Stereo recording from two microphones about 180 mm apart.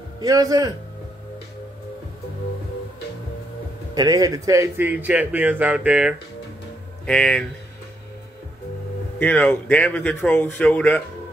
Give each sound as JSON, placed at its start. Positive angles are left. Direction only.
{"t": 0.2, "sound": "a man's voice", "side_deg": -20}
{"t": 3.9, "sound": "speech", "side_deg": -20}
{"t": 7.1, "sound": "speech", "side_deg": 5}
{"t": 9.2, "sound": "speech", "side_deg": 10}